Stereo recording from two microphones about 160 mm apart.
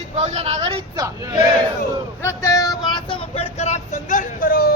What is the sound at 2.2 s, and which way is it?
Vehicle, 20° left (ahead or behind).